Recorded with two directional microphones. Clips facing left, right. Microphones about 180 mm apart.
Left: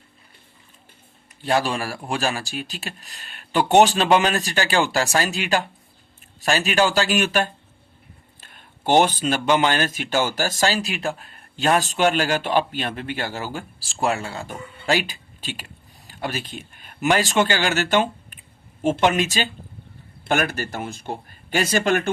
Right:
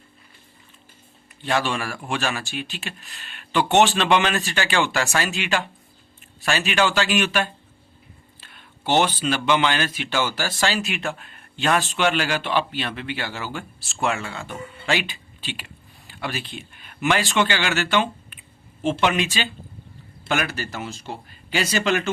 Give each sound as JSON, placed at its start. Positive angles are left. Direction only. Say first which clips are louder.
{"t": 1.5, "sound": "speech", "louder": "left 2 dB", "side_deg": 35}